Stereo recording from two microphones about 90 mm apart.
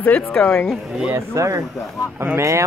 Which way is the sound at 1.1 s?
35° right (ahead or behind).